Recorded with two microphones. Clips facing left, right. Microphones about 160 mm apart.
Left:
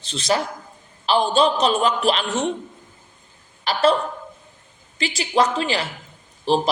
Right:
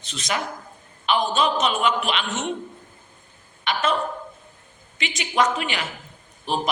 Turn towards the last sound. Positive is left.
turn(degrees=30)  # may be behind; listen again after turning